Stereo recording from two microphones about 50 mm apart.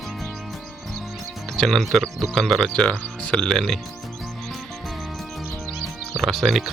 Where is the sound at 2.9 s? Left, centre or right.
Centre.